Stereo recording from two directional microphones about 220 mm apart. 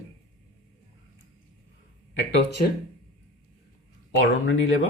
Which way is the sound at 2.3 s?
50° left (ahead or behind).